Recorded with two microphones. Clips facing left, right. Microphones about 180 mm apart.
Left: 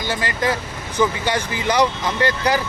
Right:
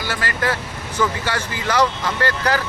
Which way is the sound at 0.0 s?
20° left (ahead or behind).